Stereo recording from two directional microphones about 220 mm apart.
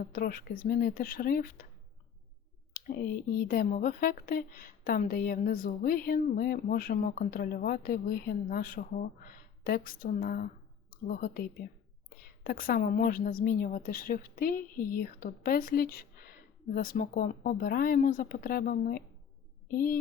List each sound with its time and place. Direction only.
0.0 s speech: 40° left (ahead or behind)
2.7 s speech: 40° left (ahead or behind)